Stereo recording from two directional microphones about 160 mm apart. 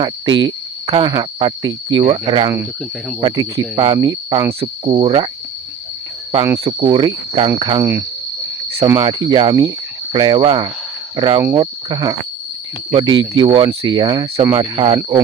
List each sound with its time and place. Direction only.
0.0 s speech: 30° right (ahead or behind)
6.4 s speech: 20° right (ahead or behind)
6.7 s cricket: 30° right (ahead or behind)
7.6 s speech: 25° right (ahead or behind)